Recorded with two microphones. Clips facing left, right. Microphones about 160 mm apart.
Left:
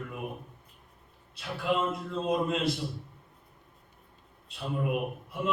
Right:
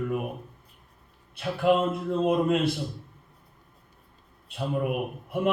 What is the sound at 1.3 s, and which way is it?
A man's voice, 55° right (ahead or behind).